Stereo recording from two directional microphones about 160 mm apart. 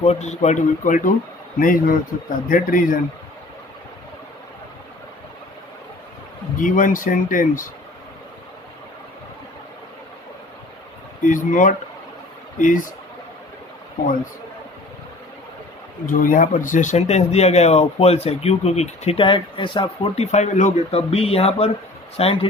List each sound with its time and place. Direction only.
0.0 s speech: 45° left (ahead or behind); by 3.0 s 60° left (ahead or behind)
6.6 s speech: 55° left (ahead or behind)
11.3 s speech: 55° left (ahead or behind)
16.0 s speech: 60° left (ahead or behind); by 22.4 s 35° left (ahead or behind)